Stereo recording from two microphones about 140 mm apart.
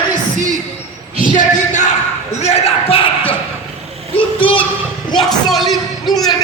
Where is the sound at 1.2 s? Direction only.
70° left (ahead or behind).